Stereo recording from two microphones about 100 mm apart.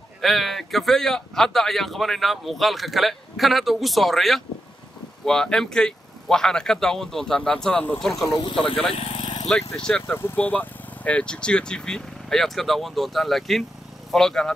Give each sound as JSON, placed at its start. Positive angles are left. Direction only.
{"t": 0.2, "sound": "speech", "side_deg": 0}
{"t": 8.9, "sound": "vehicle", "side_deg": 75}
{"t": 9.8, "sound": "speech", "side_deg": 5}
{"t": 10.1, "sound": "speech", "side_deg": 20}